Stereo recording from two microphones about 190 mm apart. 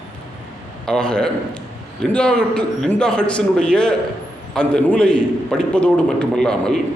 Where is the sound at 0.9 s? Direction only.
5° left (ahead or behind).